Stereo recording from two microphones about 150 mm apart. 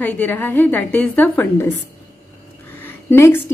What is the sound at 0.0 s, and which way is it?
A woman's voice, 10° left (ahead or behind).